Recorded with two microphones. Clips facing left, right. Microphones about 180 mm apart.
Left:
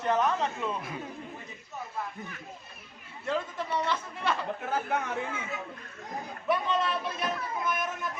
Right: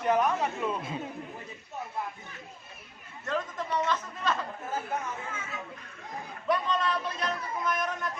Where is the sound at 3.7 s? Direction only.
10° left (ahead or behind).